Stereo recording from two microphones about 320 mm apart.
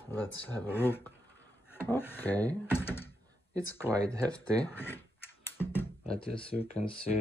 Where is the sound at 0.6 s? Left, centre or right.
Centre.